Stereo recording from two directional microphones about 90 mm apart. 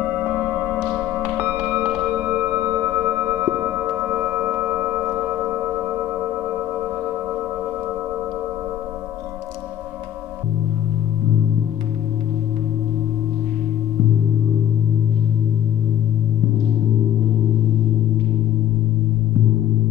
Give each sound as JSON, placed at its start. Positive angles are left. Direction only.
{"t": 0.2, "sound": "music", "side_deg": -15}
{"t": 3.9, "sound": "singing bowl", "side_deg": -15}
{"t": 5.3, "sound": "singing bowl", "side_deg": -20}